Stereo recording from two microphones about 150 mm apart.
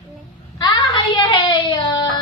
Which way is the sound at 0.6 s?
30° left (ahead or behind).